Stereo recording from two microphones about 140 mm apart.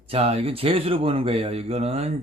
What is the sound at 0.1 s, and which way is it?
Speech, 45° right (ahead or behind).